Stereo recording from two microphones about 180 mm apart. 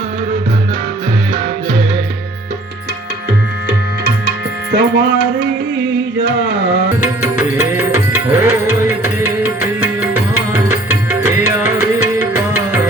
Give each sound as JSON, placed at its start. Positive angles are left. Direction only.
{"t": 4.7, "sound": "music", "side_deg": -75}
{"t": 7.0, "sound": "music", "side_deg": -15}